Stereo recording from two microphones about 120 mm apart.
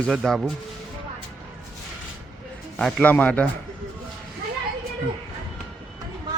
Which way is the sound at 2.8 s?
5° left (ahead or behind).